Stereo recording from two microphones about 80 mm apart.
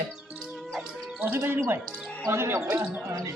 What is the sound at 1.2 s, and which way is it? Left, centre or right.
Speech, right.